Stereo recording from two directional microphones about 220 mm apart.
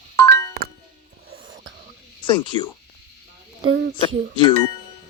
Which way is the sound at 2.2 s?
20° left (ahead or behind).